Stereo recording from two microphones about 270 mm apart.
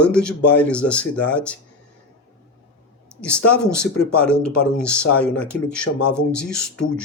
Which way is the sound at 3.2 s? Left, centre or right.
Centre.